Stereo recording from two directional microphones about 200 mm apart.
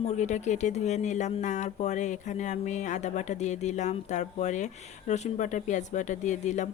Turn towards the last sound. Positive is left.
turn(degrees=35)  # may be behind; listen again after turning